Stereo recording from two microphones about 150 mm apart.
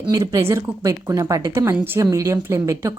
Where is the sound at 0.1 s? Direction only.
20° right (ahead or behind).